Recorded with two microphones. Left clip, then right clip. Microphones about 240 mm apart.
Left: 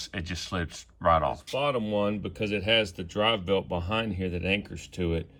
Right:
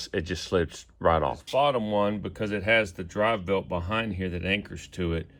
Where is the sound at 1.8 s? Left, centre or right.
Centre.